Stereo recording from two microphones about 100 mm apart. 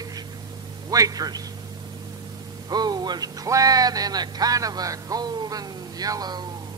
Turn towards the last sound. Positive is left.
turn(degrees=-45)  # may be behind; listen again after turning